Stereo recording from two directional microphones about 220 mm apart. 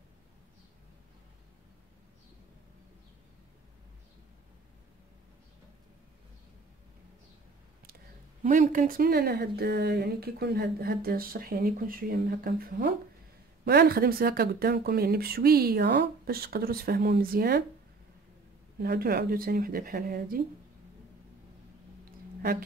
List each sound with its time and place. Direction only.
8.4 s speech: 35° right (ahead or behind)
18.8 s speech: 45° right (ahead or behind)